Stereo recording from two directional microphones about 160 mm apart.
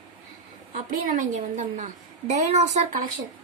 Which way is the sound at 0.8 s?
55° right (ahead or behind).